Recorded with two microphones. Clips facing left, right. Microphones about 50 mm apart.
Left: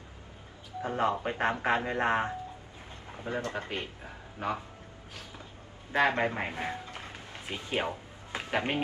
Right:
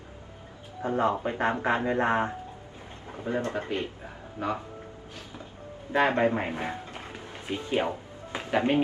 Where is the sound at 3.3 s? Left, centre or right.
Right.